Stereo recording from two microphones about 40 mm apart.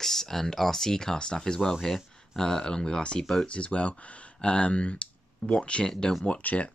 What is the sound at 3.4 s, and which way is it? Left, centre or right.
Speech, left.